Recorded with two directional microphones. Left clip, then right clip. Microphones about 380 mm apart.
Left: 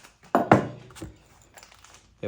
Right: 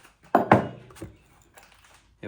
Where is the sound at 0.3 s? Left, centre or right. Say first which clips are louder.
Right 1 dB; centre.